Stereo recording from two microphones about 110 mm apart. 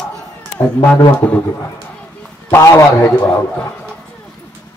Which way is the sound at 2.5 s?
25° left (ahead or behind).